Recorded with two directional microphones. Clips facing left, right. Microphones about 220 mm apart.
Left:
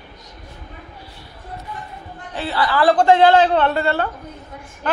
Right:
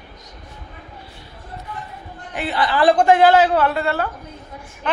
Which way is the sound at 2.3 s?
20° right (ahead or behind).